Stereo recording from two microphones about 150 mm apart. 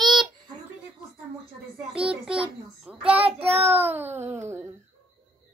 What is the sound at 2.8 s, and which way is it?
Child singing, 5° right (ahead or behind).